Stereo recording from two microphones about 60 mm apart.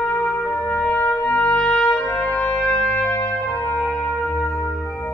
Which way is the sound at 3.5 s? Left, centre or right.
Left.